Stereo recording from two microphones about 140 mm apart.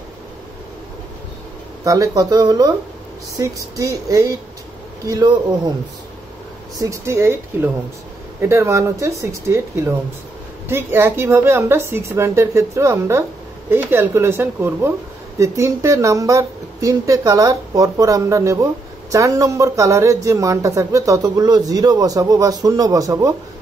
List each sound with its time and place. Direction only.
1.9 s speech: 25° right (ahead or behind)
6.8 s speech: 20° right (ahead or behind)